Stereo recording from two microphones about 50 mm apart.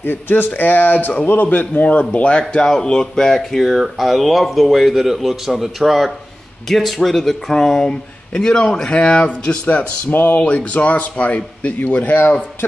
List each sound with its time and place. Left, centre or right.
0.0 s a man's voice: left; by 3.6 s centre
3.6 s speech: centre; by 9.6 s left
9.7 s speech: left
10.4 s a man's voice: left